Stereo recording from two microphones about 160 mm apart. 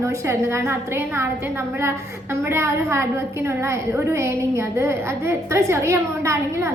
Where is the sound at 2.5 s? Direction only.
15° right (ahead or behind).